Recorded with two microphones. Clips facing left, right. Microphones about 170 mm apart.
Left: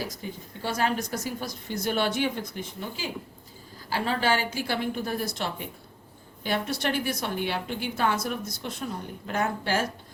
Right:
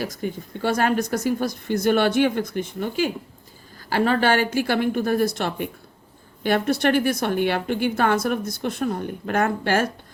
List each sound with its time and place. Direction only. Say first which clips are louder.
0.0 s a woman's voice: right 7 dB; 60° right (ahead or behind)